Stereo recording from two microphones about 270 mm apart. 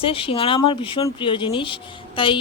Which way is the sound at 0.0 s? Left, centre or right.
Centre.